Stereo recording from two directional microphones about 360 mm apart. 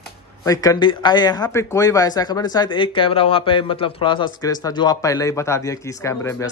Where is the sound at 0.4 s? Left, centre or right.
Centre.